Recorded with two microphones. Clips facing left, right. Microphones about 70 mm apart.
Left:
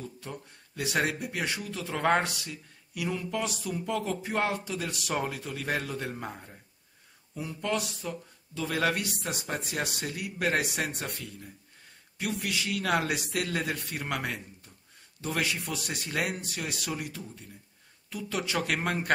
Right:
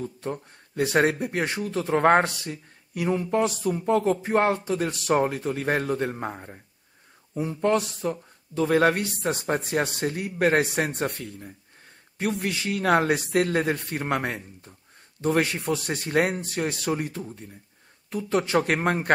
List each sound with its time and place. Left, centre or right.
0.0 s speech: right